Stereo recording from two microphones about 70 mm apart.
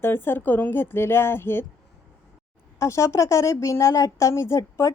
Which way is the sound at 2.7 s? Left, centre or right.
Left.